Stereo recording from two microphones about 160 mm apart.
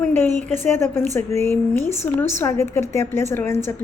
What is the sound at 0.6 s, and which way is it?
A woman's voice, 15° left (ahead or behind).